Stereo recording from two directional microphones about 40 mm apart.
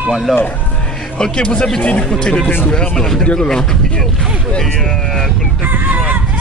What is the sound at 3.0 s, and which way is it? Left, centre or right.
Speech, centre.